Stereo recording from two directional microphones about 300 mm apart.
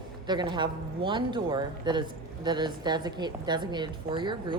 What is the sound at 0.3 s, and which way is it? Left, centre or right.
Speech, centre.